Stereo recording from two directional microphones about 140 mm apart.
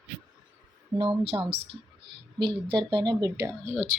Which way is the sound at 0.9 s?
45° right (ahead or behind).